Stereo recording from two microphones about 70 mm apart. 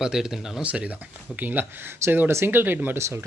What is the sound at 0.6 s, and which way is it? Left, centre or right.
Speech, centre.